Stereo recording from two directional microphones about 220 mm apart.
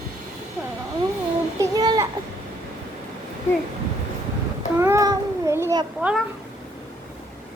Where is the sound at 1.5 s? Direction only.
15° right (ahead or behind).